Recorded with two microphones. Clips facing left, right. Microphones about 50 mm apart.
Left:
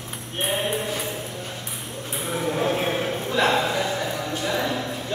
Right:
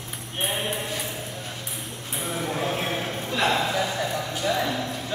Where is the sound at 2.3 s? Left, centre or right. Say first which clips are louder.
Left 4 dB; centre.